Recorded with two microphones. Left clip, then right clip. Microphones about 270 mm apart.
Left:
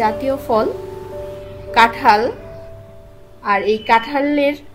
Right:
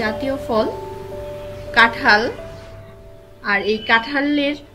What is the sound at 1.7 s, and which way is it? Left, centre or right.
Speech, left.